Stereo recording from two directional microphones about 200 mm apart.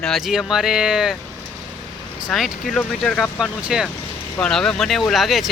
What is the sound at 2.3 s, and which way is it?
Speech, centre (ahead or behind).